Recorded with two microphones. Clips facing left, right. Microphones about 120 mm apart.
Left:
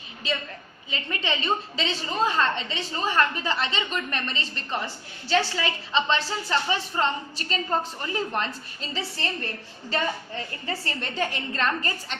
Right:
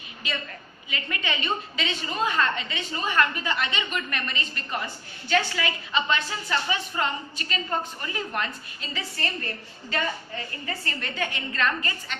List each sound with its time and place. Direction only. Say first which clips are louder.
0.9 s a woman's voice: left 2 dB; 30° left (ahead or behind)